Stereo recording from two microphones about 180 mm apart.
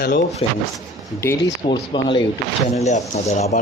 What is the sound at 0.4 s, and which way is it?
Speech, 30° left (ahead or behind).